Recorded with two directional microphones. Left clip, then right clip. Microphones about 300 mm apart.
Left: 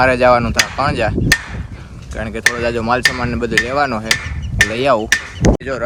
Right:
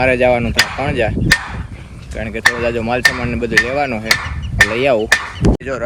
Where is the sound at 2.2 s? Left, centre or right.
Centre.